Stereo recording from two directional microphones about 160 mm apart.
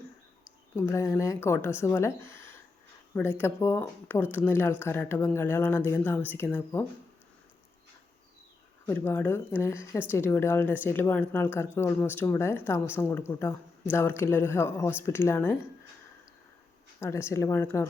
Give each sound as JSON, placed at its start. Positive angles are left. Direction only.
{"t": 0.8, "sound": "speech", "side_deg": 15}
{"t": 8.9, "sound": "speech", "side_deg": 10}
{"t": 17.0, "sound": "speech", "side_deg": 15}